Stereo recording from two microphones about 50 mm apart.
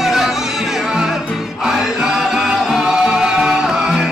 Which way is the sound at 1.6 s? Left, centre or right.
Centre.